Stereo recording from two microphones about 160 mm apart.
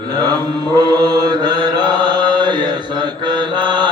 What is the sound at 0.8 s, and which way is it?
Mantra, 25° right (ahead or behind).